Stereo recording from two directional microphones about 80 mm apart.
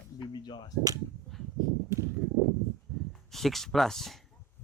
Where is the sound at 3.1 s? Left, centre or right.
Centre.